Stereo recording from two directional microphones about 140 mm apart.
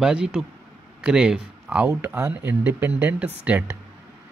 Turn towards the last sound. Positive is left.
turn(degrees=-10)  # may be behind; listen again after turning